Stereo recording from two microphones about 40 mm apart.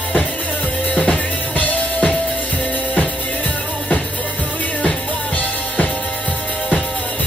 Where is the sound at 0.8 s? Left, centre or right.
Left.